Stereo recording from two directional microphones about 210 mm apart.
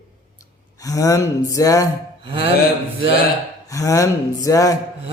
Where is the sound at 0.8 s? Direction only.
15° left (ahead or behind).